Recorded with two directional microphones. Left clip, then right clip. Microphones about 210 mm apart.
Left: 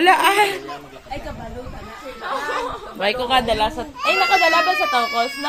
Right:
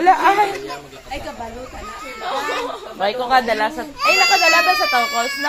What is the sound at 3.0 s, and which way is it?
Speech, 25° left (ahead or behind).